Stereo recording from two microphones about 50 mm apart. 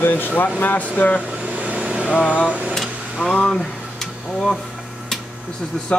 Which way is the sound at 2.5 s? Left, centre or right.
Right.